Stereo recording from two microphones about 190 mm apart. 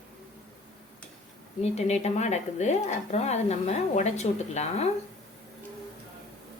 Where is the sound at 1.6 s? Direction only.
35° left (ahead or behind).